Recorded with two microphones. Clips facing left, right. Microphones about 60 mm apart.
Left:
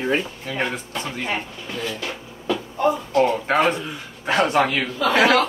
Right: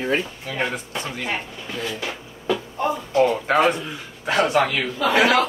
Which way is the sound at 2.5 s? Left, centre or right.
Centre.